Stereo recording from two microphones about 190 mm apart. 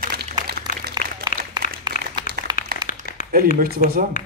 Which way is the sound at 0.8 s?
55° right (ahead or behind).